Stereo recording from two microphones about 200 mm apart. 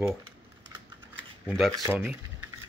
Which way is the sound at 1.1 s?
10° right (ahead or behind).